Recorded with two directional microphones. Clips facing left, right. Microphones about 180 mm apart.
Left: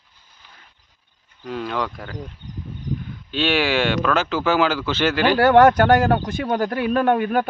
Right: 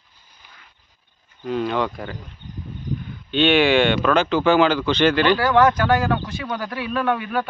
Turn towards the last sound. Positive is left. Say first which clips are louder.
# left 4 dB
turn(degrees=50)  # may be behind; listen again after turning